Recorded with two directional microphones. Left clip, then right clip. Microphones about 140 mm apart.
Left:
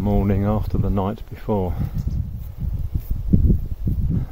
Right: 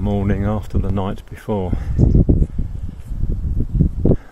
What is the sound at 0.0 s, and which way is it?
Speech, centre (ahead or behind).